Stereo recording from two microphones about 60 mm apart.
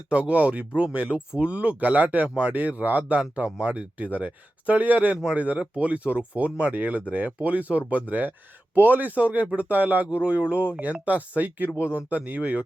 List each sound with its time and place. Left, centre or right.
0.1 s speech: right